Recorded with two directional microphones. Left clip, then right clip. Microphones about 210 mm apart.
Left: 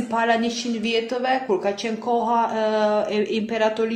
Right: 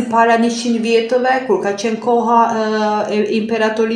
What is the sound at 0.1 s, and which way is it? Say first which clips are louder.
Speech: right 8 dB; 45° left (ahead or behind).